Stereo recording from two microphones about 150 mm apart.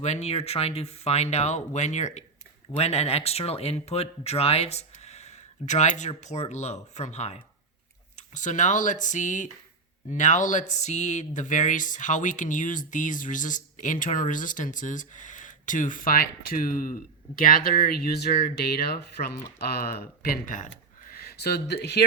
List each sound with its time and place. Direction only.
0.0 s speech: 45° left (ahead or behind); by 17.5 s 65° left (ahead or behind)
17.9 s speech: 90° left; by 20.7 s 65° left (ahead or behind)
21.1 s speech: 90° left